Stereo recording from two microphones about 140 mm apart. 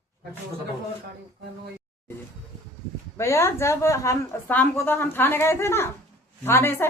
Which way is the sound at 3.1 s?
20° left (ahead or behind).